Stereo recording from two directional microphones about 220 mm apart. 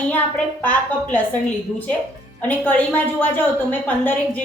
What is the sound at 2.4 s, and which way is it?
A woman's voice, 10° left (ahead or behind).